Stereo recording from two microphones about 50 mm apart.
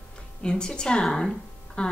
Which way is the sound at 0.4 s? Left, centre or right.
Centre.